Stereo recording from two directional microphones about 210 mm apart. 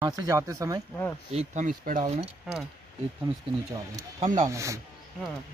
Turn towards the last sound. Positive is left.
turn(degrees=-15)  # may be behind; listen again after turning